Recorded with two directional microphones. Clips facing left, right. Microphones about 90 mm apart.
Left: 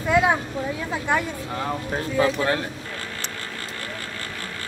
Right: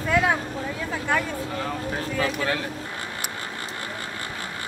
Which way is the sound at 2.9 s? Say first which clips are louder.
Even; 20° right (ahead or behind).